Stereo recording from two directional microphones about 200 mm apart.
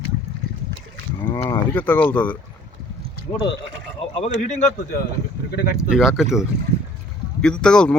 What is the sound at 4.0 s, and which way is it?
Speech, 30° left (ahead or behind).